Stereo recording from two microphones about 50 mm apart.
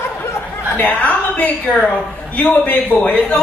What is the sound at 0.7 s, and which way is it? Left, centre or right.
Speech, left.